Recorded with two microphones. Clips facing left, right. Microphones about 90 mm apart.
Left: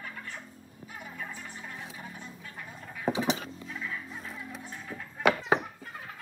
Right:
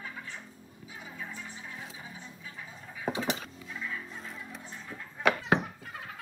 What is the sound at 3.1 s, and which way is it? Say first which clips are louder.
Music: left 3 dB; 15° left (ahead or behind).